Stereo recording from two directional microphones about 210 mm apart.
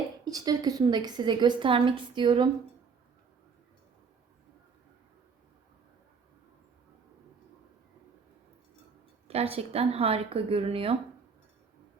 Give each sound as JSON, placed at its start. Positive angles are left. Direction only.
{"t": 0.3, "sound": "a woman's voice", "side_deg": -15}
{"t": 9.2, "sound": "a woman's voice", "side_deg": -30}